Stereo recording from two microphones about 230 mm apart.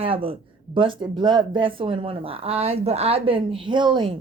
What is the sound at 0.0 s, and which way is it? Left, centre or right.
A woman's voice, right.